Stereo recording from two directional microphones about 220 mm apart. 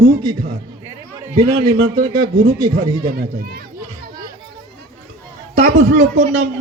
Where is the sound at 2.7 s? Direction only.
40° right (ahead or behind).